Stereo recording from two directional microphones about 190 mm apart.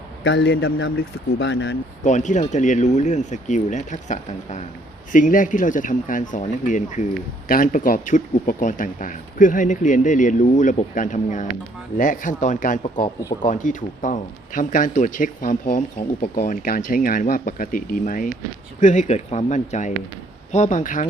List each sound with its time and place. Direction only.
0.3 s speech: 65° left (ahead or behind)
2.0 s speech: 40° left (ahead or behind)